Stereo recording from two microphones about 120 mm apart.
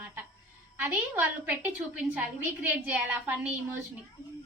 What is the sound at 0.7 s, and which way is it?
A woman's voice, 15° right (ahead or behind).